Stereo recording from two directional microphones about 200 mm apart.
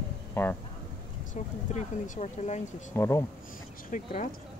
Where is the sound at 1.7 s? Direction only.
35° left (ahead or behind).